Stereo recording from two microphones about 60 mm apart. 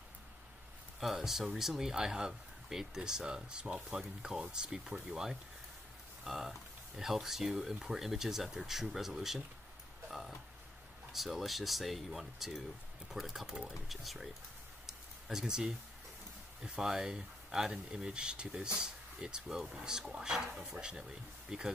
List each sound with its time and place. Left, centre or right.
0.9 s speech: centre
11.1 s speech: centre
14.9 s a sound: centre
16.6 s speech: centre